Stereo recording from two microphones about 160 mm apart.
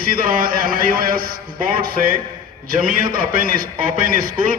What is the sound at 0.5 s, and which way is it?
Speech, 65° right (ahead or behind).